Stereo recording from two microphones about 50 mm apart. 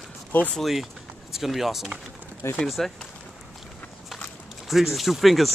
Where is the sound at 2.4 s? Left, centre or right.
Left.